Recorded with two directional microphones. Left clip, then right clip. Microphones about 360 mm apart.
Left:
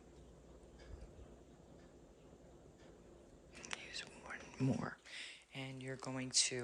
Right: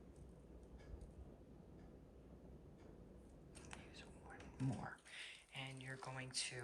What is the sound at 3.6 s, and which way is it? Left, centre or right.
Whispering, centre.